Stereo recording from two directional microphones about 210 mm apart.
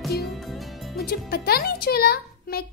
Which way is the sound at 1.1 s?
45° left (ahead or behind).